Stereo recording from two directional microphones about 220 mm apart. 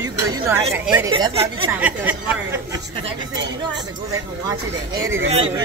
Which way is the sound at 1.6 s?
5° right (ahead or behind).